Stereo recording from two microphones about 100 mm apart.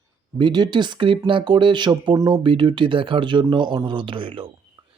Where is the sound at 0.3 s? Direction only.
50° right (ahead or behind).